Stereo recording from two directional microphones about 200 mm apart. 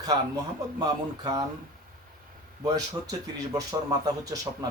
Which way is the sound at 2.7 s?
20° right (ahead or behind).